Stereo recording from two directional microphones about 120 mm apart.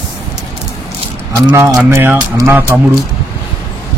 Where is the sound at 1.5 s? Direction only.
20° right (ahead or behind).